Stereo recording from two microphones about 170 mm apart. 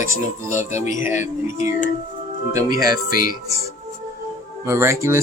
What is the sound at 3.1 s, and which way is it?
Speech, 55° left (ahead or behind).